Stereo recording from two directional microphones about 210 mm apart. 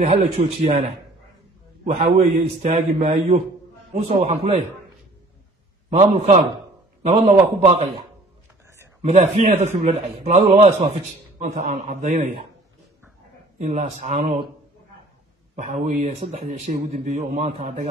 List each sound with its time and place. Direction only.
0.0 s a man's voice: 30° right (ahead or behind)
1.9 s a man's voice: 30° right (ahead or behind)
5.9 s a man's voice: 30° right (ahead or behind)
9.0 s a man's voice: 35° right (ahead or behind)
13.6 s a man's voice: 35° right (ahead or behind)
15.5 s a man's voice: 35° right (ahead or behind)